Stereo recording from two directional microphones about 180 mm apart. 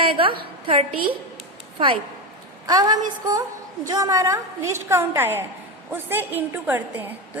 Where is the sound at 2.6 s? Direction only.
20° right (ahead or behind).